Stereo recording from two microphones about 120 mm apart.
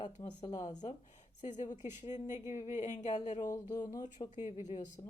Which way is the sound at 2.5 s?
70° left (ahead or behind).